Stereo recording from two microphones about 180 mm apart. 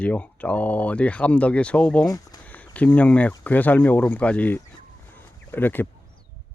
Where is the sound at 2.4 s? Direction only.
10° left (ahead or behind).